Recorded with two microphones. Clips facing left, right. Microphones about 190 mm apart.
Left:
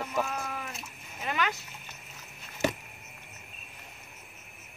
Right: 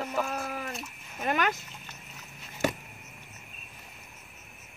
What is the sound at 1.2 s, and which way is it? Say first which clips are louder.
Speech: right 4 dB; 50° right (ahead or behind).